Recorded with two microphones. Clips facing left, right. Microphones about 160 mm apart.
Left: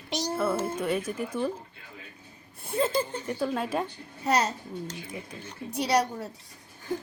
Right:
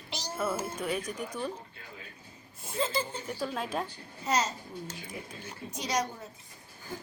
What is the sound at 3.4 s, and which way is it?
Speech, 5° left (ahead or behind).